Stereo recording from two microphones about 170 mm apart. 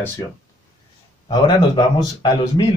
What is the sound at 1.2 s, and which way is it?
Speech, 25° left (ahead or behind).